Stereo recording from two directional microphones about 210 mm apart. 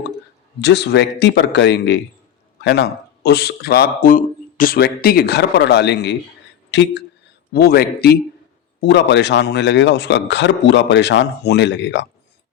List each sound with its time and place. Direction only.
0.6 s a man's voice: 55° left (ahead or behind)